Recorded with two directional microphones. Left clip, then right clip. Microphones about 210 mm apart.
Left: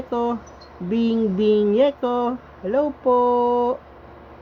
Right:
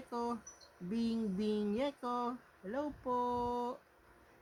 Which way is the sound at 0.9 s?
90° right.